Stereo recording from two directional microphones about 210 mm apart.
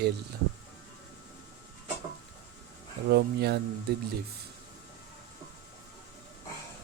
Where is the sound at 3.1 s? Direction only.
50° right (ahead or behind).